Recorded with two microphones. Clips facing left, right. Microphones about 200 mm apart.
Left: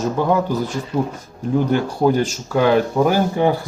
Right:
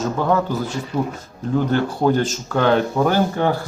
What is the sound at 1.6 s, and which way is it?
Speech, 10° left (ahead or behind).